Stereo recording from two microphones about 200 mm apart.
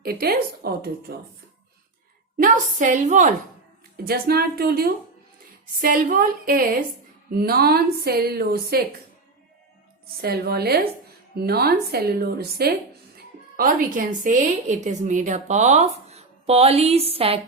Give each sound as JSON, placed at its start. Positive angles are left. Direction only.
{"t": 0.0, "sound": "a woman's voice", "side_deg": -50}
{"t": 2.4, "sound": "a woman's voice", "side_deg": -40}
{"t": 3.9, "sound": "a woman's voice", "side_deg": -50}
{"t": 10.2, "sound": "a woman's voice", "side_deg": -50}